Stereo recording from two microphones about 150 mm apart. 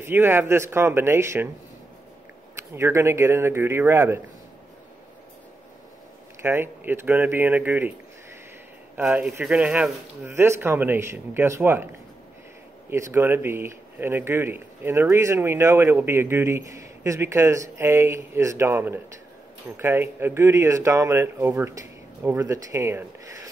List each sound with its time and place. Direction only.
0.0 s speech: 15° right (ahead or behind)
2.7 s speech: 15° right (ahead or behind)
6.4 s speech: 15° right (ahead or behind)
8.9 s speech: 10° right (ahead or behind)
12.9 s speech: 15° right (ahead or behind)